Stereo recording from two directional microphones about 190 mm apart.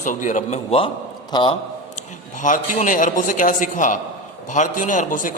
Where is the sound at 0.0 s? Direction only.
40° left (ahead or behind); by 1.5 s 25° left (ahead or behind).